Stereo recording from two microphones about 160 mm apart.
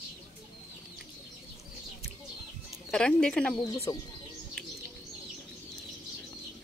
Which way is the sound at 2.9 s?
5° left (ahead or behind).